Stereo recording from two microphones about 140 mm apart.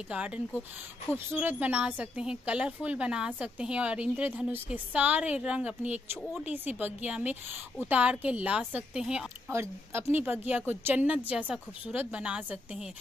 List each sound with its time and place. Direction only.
0.1 s a woman's voice: 10° right (ahead or behind)
9.5 s a woman's voice: 20° right (ahead or behind)